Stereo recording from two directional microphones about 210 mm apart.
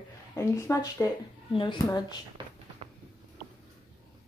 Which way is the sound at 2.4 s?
20° right (ahead or behind).